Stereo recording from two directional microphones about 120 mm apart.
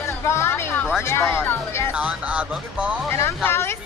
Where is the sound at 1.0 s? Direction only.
20° left (ahead or behind).